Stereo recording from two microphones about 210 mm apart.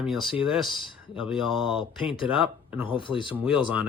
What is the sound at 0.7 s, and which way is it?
Speech, 25° left (ahead or behind).